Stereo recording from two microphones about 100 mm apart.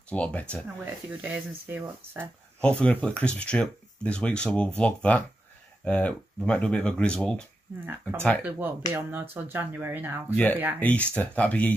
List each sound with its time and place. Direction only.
0.1 s speech: 15° left (ahead or behind)
1.2 s speech: 15° right (ahead or behind)
2.6 s speech: 10° left (ahead or behind)
8.5 s speech: 20° right (ahead or behind)
10.3 s speech: 15° left (ahead or behind)